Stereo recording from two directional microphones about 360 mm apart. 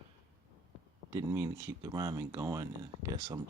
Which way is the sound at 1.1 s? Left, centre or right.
Centre.